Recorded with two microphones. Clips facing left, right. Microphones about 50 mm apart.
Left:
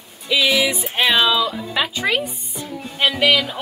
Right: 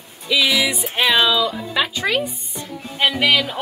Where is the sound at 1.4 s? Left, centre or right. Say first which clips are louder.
Right 1 dB; centre.